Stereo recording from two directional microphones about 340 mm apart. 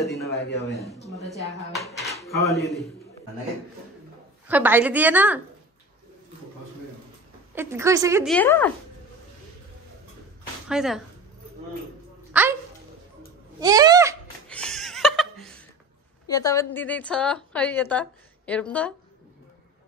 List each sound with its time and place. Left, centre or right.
0.0 s speech: centre
2.0 s a sound: centre
2.6 s a woman's voice: centre
4.5 s a woman's voice: centre
7.5 s a woman's voice: centre
10.7 s a woman's voice: centre
12.3 s a sound: centre
13.6 s speech: centre
14.5 s laughter: centre
16.3 s a woman's voice: centre